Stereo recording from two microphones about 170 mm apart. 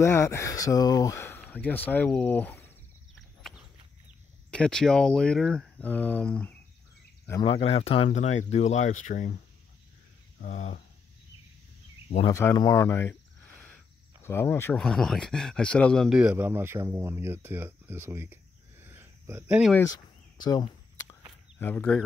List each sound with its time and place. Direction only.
0.0 s speech: 15° left (ahead or behind)
4.5 s speech: 5° left (ahead or behind)
7.6 s speech: 35° left (ahead or behind)
10.4 s speech: 45° left (ahead or behind)
12.3 s speech: 20° left (ahead or behind)
14.2 s speech: 15° left (ahead or behind)
14.8 s speech: centre (ahead or behind); by 19.6 s 15° right (ahead or behind)
19.8 s a sound: 20° left (ahead or behind)
21.5 s speech: 10° left (ahead or behind)